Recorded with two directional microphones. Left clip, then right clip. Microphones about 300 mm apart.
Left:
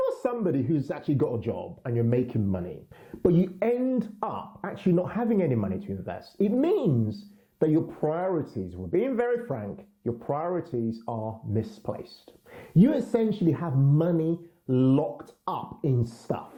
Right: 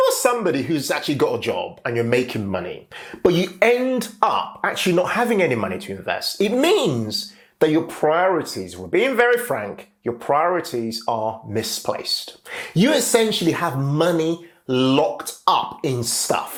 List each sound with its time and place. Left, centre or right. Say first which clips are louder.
0.0 s speech: right 10 dB; centre